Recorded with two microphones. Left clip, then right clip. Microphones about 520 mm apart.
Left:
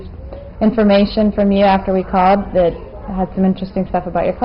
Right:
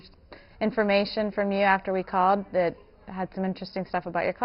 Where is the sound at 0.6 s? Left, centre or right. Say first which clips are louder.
Left 10 dB; right.